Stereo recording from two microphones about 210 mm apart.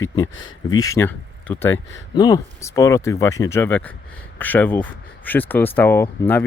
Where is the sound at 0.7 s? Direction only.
15° left (ahead or behind).